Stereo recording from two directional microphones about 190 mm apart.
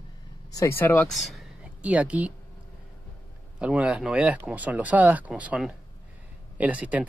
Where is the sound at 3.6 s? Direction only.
5° right (ahead or behind).